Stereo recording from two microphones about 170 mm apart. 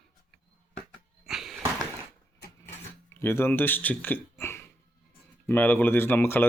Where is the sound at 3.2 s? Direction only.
15° left (ahead or behind).